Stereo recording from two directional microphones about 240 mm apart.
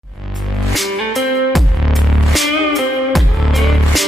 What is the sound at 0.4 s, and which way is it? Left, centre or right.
Music, centre.